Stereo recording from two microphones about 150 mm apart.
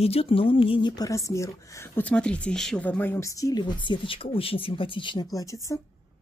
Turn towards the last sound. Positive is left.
turn(degrees=25)  # may be behind; listen again after turning